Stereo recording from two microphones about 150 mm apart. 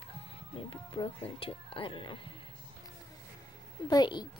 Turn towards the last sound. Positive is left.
turn(degrees=30)  # may be behind; listen again after turning